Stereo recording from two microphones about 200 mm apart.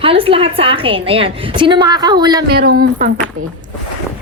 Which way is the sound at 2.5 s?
55° right (ahead or behind).